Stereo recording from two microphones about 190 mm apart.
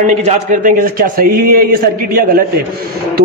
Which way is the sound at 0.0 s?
40° right (ahead or behind).